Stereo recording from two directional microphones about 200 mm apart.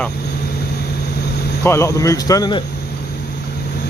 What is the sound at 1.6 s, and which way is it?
Speech, 15° left (ahead or behind).